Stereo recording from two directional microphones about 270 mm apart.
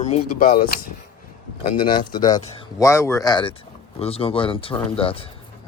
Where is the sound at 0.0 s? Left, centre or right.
Left.